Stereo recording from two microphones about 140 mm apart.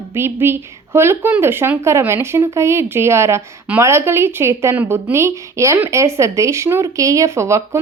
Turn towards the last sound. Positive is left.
turn(degrees=-20)  # may be behind; listen again after turning